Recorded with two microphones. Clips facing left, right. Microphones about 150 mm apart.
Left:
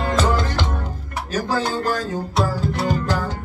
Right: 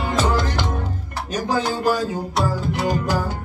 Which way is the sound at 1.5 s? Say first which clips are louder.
Right 3 dB; 15° right (ahead or behind).